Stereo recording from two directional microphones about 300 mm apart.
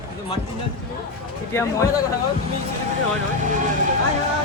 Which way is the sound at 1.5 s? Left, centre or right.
Centre.